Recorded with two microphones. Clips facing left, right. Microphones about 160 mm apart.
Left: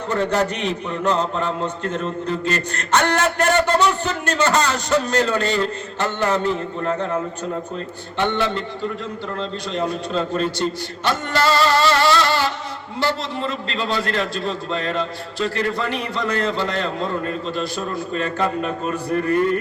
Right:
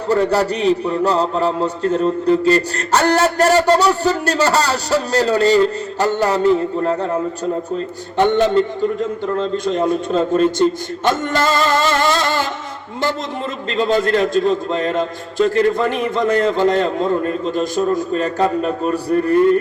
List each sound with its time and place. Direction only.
0.1 s a man's voice: 35° right (ahead or behind)
8.2 s a man's voice: 45° right (ahead or behind)
13.7 s a man's voice: 45° right (ahead or behind)